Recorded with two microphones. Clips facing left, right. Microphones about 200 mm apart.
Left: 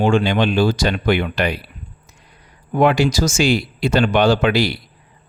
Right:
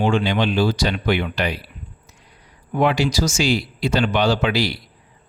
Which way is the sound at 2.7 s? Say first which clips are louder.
Left 3 dB; 50° left (ahead or behind).